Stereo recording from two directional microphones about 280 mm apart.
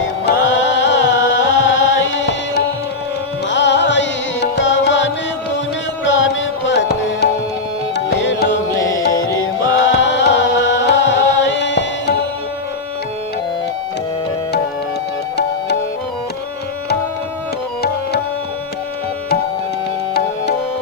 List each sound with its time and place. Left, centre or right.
0.0 s music: left
6.7 s music: left
8.8 s music: centre
9.7 s chant: left